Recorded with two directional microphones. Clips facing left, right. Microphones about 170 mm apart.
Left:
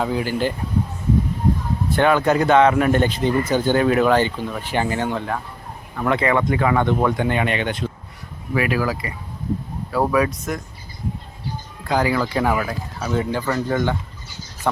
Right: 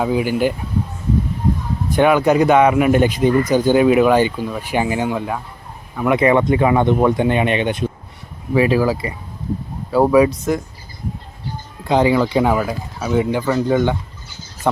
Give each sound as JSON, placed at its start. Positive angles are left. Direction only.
{"t": 0.0, "sound": "speech", "side_deg": -15}
{"t": 1.9, "sound": "speech", "side_deg": -15}
{"t": 11.9, "sound": "speech", "side_deg": -25}